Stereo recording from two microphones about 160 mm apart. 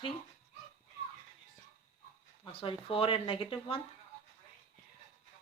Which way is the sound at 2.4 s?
35° left (ahead or behind).